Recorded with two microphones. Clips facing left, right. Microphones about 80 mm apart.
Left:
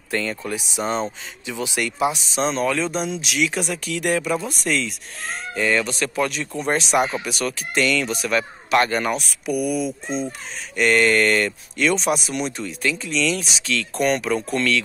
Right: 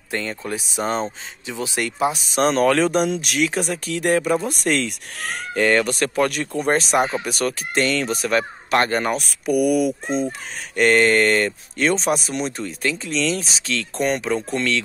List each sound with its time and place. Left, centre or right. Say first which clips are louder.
0.1 s speech: left 1 dB; right
2.3 s speech: right 5 dB; right
5.2 s speech: right 3 dB; right
9.6 s speech: right 6 dB; right
10.0 s speech: right 3 dB; right
10.8 s speech: right 2 dB; right
14.0 s speech: left 1 dB; right